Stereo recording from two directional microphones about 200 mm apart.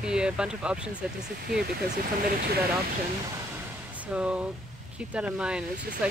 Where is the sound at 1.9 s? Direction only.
40° right (ahead or behind).